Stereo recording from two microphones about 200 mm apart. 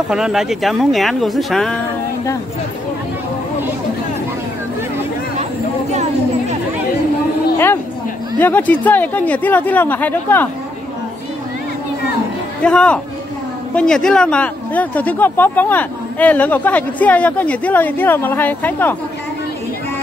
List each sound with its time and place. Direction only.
0.1 s speech: 5° right (ahead or behind)
5.9 s a sound: 35° right (ahead or behind)
7.5 s a woman's voice: 10° left (ahead or behind)
12.6 s speech: 5° left (ahead or behind)